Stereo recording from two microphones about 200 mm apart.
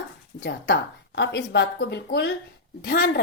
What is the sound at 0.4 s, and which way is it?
A woman's voice, 55° left (ahead or behind).